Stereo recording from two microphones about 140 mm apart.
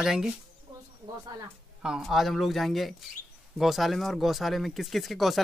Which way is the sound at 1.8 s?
Centre (ahead or behind).